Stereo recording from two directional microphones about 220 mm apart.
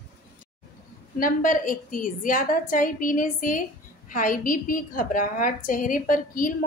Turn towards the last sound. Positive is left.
turn(degrees=40)  # may be behind; listen again after turning